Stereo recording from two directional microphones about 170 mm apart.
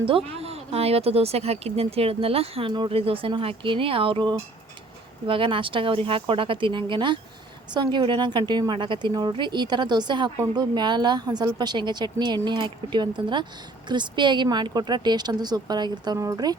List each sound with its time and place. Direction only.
0.3 s a woman's voice: 35° right (ahead or behind); by 16.6 s 20° right (ahead or behind)